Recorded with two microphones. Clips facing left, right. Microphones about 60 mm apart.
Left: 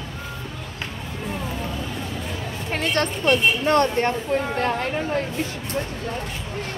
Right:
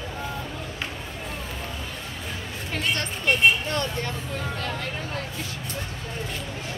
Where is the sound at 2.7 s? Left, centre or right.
Left.